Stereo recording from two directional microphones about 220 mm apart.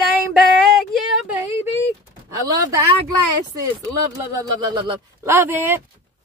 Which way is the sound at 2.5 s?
15° right (ahead or behind).